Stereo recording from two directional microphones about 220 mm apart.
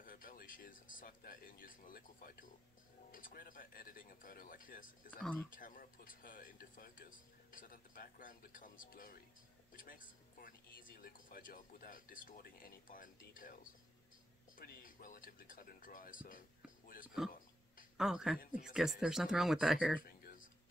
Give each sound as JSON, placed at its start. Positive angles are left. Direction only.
{"t": 0.0, "sound": "speech", "side_deg": 40}
{"t": 5.2, "sound": "speech", "side_deg": 5}
{"t": 5.5, "sound": "speech", "side_deg": 40}
{"t": 14.6, "sound": "speech", "side_deg": 40}
{"t": 17.9, "sound": "speech", "side_deg": 0}
{"t": 20.0, "sound": "a sound", "side_deg": 40}